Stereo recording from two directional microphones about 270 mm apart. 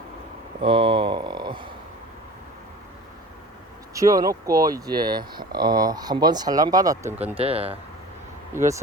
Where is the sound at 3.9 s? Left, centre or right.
Centre.